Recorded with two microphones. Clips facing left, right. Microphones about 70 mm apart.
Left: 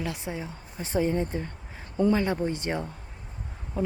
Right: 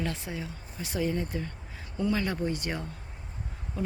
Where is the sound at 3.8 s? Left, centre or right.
Left.